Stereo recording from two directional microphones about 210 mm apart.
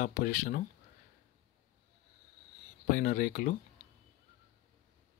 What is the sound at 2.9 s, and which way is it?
Speech, 45° left (ahead or behind).